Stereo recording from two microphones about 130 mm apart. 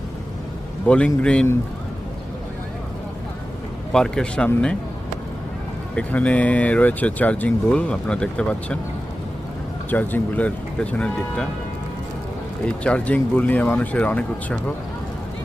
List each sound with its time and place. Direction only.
0.9 s speech: 10° left (ahead or behind)
3.9 s a man's voice: 5° left (ahead or behind)
6.0 s speech: 10° left (ahead or behind)
9.9 s speech: 10° left (ahead or behind)
12.6 s speech: 10° left (ahead or behind)